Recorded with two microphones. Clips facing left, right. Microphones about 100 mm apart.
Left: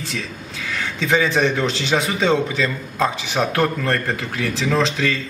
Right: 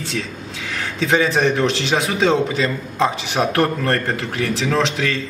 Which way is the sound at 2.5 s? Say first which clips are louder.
Right 2 dB; 20° right (ahead or behind).